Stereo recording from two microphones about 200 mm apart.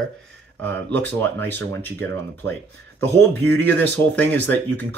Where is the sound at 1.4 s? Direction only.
10° left (ahead or behind).